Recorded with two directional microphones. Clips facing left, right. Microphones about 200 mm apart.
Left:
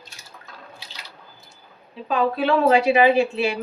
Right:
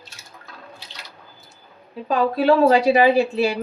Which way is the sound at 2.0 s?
40° right (ahead or behind).